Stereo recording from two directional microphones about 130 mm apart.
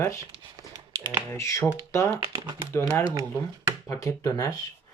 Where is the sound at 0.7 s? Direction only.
30° right (ahead or behind).